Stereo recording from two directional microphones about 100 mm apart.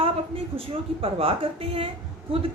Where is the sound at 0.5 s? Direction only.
70° right (ahead or behind).